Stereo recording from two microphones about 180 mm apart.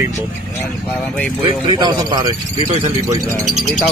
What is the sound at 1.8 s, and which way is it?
Speech, 25° right (ahead or behind).